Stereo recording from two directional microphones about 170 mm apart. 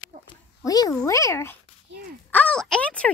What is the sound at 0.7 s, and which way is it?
Speech, 20° left (ahead or behind).